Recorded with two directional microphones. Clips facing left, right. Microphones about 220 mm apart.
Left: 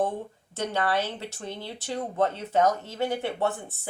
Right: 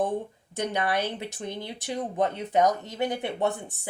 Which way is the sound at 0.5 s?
15° right (ahead or behind).